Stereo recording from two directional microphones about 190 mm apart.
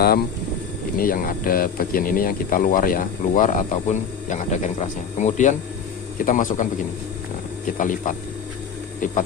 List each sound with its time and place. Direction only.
0.9 s speech: 50° left (ahead or behind)
7.8 s speech: 45° left (ahead or behind)